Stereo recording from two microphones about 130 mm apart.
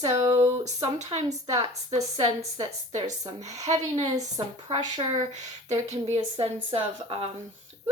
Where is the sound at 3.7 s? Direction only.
60° right (ahead or behind).